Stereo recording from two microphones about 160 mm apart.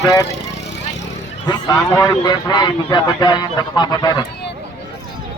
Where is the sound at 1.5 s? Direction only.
20° left (ahead or behind).